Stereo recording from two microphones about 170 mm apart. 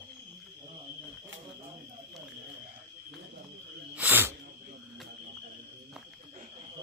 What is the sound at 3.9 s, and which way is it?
Snake, 10° right (ahead or behind).